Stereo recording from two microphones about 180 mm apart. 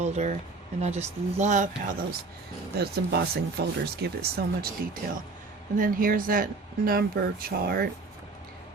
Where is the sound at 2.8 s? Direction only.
60° right (ahead or behind).